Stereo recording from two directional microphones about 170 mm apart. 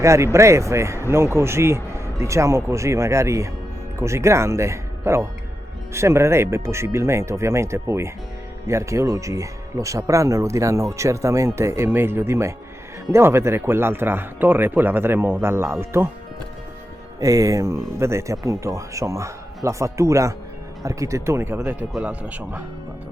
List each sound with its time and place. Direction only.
0.0 s speech: 15° right (ahead or behind)
17.2 s speech: 20° right (ahead or behind)